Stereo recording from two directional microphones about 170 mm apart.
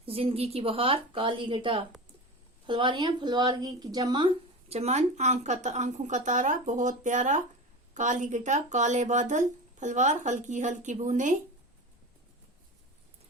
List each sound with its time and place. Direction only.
0.0 s a woman's voice: 35° right (ahead or behind)
4.7 s speech: 40° right (ahead or behind)